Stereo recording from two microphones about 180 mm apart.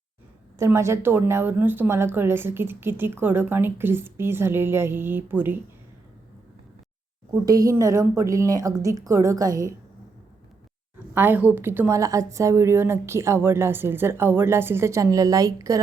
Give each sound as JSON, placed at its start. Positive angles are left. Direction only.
{"t": 0.6, "sound": "speech", "side_deg": -15}
{"t": 7.3, "sound": "speech", "side_deg": -20}
{"t": 11.1, "sound": "speech", "side_deg": -10}